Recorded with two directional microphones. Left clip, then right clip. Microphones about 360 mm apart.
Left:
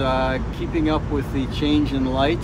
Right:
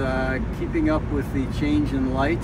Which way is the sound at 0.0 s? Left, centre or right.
Left.